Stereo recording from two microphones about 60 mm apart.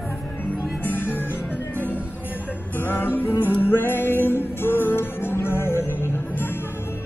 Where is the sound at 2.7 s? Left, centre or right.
Left.